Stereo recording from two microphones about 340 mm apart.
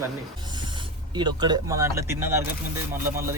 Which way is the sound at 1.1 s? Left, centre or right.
Centre.